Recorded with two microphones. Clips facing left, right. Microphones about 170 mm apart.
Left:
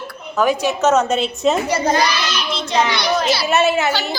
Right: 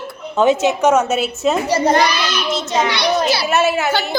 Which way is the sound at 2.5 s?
45° right (ahead or behind).